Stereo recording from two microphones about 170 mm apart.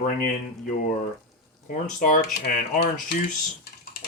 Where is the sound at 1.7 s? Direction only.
50° left (ahead or behind).